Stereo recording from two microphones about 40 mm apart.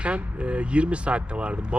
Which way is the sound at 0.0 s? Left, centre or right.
Right.